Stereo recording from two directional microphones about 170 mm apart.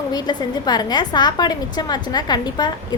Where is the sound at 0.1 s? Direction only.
25° left (ahead or behind).